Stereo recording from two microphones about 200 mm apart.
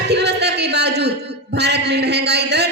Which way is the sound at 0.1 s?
55° right (ahead or behind).